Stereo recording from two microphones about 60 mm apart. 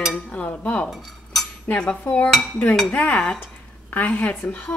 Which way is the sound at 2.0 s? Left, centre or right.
Left.